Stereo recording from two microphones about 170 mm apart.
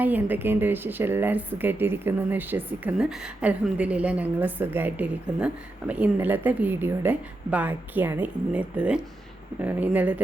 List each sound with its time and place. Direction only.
0.0 s speech: 10° right (ahead or behind)